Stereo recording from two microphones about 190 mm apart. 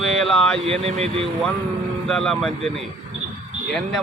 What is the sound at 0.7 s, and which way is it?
Speech, 35° right (ahead or behind).